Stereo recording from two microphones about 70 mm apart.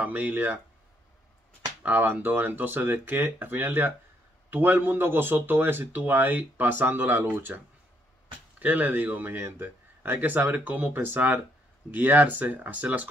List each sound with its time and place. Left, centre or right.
0.0 s a man's voice: right
1.8 s a man's voice: right